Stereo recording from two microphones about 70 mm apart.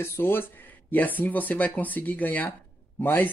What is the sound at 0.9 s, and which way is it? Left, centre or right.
Speech, left.